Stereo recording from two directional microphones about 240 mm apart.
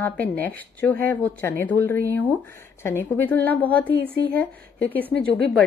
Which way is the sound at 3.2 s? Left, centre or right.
Centre.